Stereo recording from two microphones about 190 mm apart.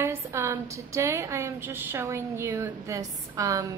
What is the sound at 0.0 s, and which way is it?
A woman's voice, 15° right (ahead or behind).